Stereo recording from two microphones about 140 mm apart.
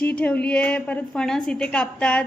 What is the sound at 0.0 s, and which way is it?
A woman's voice, 10° left (ahead or behind).